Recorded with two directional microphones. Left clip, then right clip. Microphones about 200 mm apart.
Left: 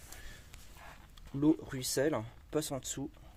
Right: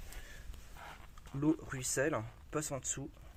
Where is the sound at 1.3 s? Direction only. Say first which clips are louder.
Left 4 dB; 20° left (ahead or behind).